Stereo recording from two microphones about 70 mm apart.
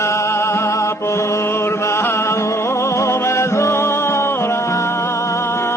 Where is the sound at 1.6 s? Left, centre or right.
Left.